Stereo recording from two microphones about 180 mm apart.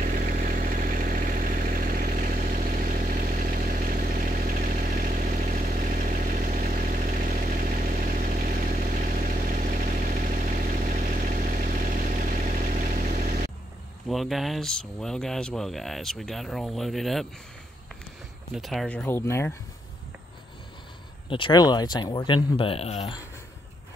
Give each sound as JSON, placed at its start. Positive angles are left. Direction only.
{"t": 0.0, "sound": "vehicle", "side_deg": -45}
{"t": 14.0, "sound": "speech", "side_deg": 0}
{"t": 18.5, "sound": "speech", "side_deg": 0}
{"t": 21.3, "sound": "speech", "side_deg": 25}